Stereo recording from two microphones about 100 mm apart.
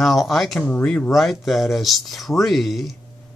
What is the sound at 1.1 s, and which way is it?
Speech, centre (ahead or behind).